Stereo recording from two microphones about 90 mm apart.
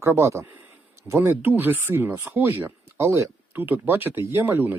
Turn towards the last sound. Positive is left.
turn(degrees=-25)  # may be behind; listen again after turning